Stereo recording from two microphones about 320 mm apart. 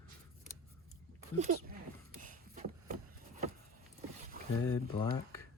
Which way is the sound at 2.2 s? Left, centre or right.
Right.